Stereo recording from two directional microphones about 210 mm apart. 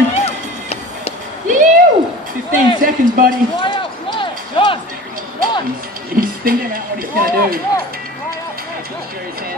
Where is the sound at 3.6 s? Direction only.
25° left (ahead or behind).